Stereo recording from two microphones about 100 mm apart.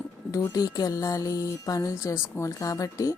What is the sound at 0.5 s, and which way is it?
Speech, 40° left (ahead or behind).